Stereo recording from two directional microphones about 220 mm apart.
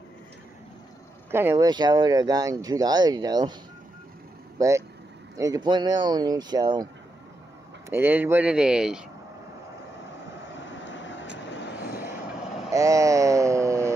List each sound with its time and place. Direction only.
1.3 s speech: 10° right (ahead or behind)
4.6 s speech: 15° right (ahead or behind)
7.9 s speech: 10° right (ahead or behind)
10.8 s vehicle: 55° left (ahead or behind)
12.7 s a sound: 15° right (ahead or behind)